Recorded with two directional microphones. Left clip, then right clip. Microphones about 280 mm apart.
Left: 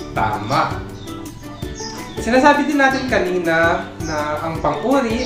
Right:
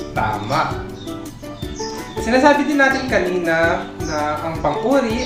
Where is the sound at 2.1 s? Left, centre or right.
Centre.